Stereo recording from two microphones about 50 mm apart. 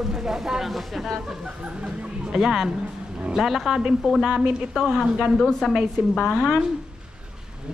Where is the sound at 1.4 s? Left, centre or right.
Right.